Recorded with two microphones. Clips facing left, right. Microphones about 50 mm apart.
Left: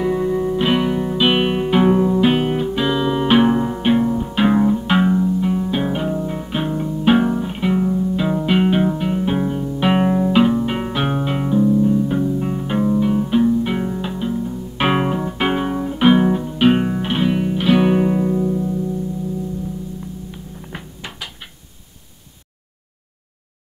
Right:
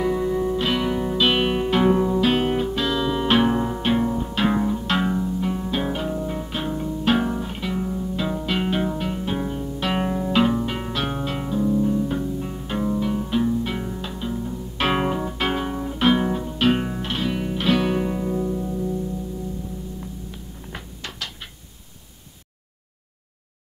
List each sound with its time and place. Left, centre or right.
0.0 s music: centre
0.6 s music: centre
0.8 s music: centre
2.4 s music: centre
2.7 s music: centre
7.9 s music: centre
11.6 s music: centre
12.3 s music: left
17.4 s music: centre
18.4 s music: centre
20.2 s music: centre